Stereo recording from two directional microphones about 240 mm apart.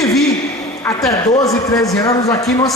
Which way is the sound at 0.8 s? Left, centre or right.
Centre.